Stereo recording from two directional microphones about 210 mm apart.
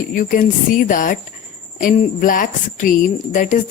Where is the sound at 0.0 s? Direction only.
40° left (ahead or behind).